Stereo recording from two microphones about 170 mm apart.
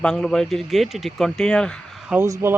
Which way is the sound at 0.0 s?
5° left (ahead or behind).